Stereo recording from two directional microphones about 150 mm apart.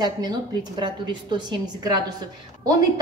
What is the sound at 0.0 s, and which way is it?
A woman's voice, 30° right (ahead or behind).